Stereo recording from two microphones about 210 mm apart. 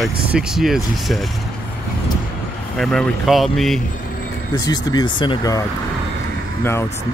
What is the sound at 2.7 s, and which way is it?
Speech, centre (ahead or behind).